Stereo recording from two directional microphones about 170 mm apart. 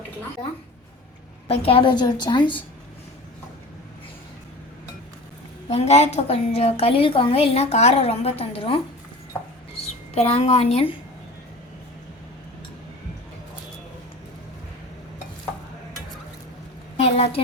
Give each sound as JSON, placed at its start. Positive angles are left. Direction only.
{"t": 1.5, "sound": "a woman's voice", "side_deg": 35}
{"t": 5.6, "sound": "a woman's voice", "side_deg": 40}
{"t": 10.2, "sound": "a woman's voice", "side_deg": 35}
{"t": 17.0, "sound": "a woman's voice", "side_deg": 35}